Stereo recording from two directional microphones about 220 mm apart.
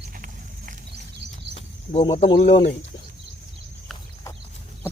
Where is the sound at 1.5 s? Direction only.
25° left (ahead or behind).